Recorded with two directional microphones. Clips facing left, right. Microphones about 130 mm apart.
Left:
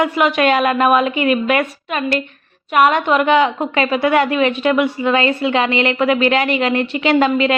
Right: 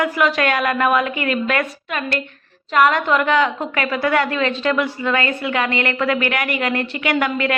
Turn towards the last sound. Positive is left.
turn(degrees=20)  # may be behind; listen again after turning